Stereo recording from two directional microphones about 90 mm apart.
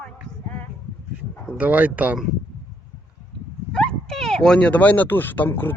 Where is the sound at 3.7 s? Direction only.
10° left (ahead or behind).